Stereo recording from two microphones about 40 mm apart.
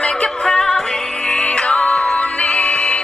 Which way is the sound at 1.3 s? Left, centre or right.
Left.